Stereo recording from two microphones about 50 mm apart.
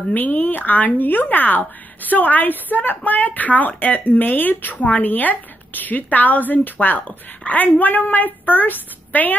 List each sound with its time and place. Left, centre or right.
0.1 s a woman's voice: left